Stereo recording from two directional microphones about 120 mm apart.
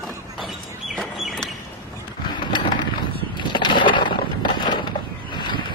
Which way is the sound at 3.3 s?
40° left (ahead or behind).